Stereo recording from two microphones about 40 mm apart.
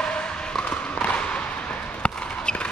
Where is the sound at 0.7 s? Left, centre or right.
Left.